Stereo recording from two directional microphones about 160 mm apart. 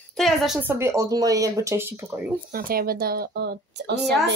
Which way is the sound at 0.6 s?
15° right (ahead or behind).